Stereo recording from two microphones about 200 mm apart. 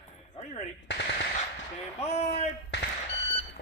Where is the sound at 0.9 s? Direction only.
60° left (ahead or behind).